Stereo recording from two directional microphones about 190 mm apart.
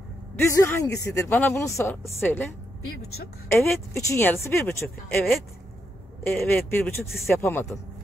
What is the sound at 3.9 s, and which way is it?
A man's voice, 15° left (ahead or behind).